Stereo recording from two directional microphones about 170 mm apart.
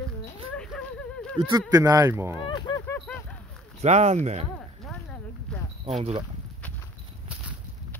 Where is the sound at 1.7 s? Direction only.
20° right (ahead or behind).